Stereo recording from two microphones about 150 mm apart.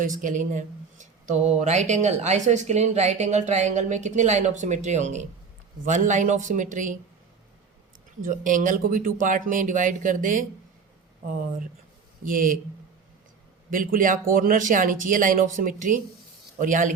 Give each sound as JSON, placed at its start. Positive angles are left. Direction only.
{"t": 0.0, "sound": "speech", "side_deg": -60}
{"t": 8.2, "sound": "speech", "side_deg": -60}
{"t": 12.2, "sound": "speech", "side_deg": -65}
{"t": 13.7, "sound": "speech", "side_deg": -65}